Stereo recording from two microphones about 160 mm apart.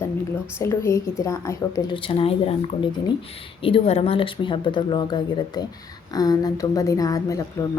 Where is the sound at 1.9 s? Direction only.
35° left (ahead or behind).